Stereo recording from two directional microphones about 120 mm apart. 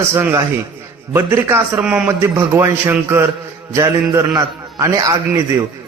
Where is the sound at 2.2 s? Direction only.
20° right (ahead or behind).